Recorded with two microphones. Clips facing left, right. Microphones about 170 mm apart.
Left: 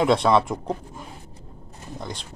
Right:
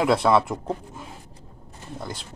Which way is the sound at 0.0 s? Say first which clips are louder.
Left 1 dB; 5° right (ahead or behind).